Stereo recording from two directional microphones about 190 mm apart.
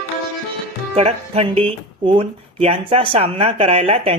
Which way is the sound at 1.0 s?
35° right (ahead or behind).